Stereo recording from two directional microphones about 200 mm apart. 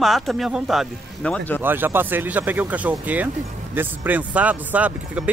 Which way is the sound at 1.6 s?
10° right (ahead or behind).